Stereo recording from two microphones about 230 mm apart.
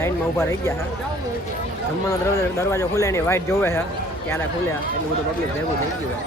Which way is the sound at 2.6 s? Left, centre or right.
Centre.